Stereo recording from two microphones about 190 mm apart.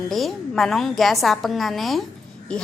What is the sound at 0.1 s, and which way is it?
A woman's voice, centre (ahead or behind).